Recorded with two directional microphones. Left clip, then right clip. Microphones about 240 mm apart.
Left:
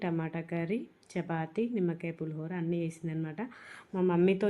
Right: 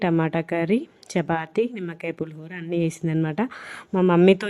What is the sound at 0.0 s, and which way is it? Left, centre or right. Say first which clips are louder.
A woman's voice: right 13 dB; right.